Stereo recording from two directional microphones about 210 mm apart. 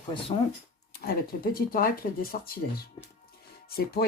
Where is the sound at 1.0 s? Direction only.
45° left (ahead or behind).